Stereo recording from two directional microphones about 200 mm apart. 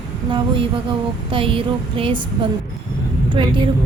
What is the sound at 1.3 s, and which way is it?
Speech, 25° right (ahead or behind).